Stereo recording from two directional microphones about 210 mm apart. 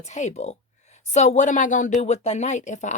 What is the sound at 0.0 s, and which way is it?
Speech, 35° left (ahead or behind).